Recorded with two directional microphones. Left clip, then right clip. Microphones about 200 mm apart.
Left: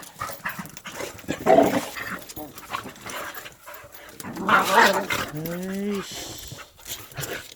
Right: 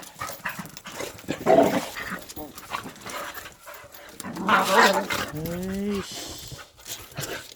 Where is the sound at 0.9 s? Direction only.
Centre (ahead or behind).